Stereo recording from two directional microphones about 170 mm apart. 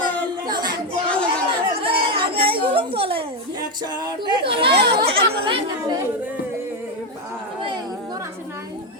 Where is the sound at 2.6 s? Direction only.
30° right (ahead or behind).